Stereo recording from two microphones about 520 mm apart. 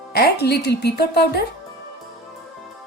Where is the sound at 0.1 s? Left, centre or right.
Centre.